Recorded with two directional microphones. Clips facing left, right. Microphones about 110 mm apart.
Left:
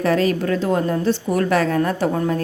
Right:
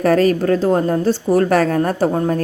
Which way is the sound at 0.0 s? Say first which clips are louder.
Right 4 dB; 45° right (ahead or behind).